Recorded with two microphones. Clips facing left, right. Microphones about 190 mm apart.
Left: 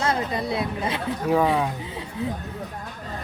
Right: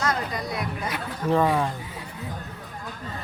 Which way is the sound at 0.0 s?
25° left (ahead or behind).